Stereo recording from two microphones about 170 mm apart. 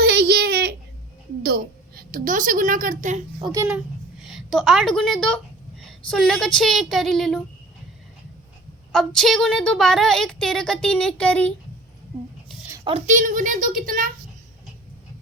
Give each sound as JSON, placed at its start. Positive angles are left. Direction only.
{"t": 0.0, "sound": "a sound", "side_deg": -75}
{"t": 1.4, "sound": "a woman's voice", "side_deg": -65}
{"t": 3.4, "sound": "a child's voice", "side_deg": -20}
{"t": 4.2, "sound": "a woman's voice", "side_deg": 0}
{"t": 8.9, "sound": "a woman's voice", "side_deg": 0}
{"t": 13.1, "sound": "a child's voice", "side_deg": -50}